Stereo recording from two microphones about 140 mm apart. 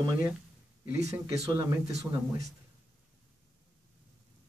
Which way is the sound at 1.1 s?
25° right (ahead or behind).